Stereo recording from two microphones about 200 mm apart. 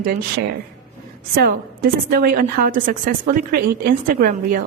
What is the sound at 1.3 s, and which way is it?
A woman's voice, 45° right (ahead or behind).